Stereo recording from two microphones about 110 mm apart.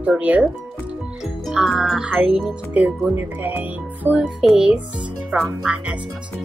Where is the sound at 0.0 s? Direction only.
10° right (ahead or behind).